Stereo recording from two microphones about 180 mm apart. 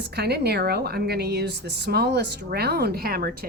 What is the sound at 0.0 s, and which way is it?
A woman's voice, 65° right (ahead or behind).